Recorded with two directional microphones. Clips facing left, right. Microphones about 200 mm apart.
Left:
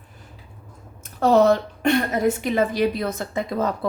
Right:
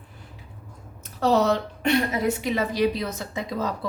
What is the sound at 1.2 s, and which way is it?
A woman's voice, 50° left (ahead or behind).